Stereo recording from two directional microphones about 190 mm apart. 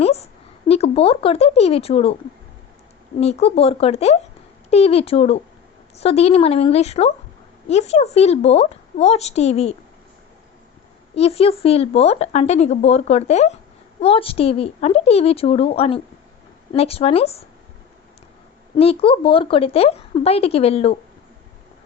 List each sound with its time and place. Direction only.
0.0 s a sound: 35° left (ahead or behind)
0.7 s speech: 30° left (ahead or behind)
3.2 s speech: 35° left (ahead or behind)
11.1 s speech: 30° left (ahead or behind)
18.8 s speech: 30° left (ahead or behind)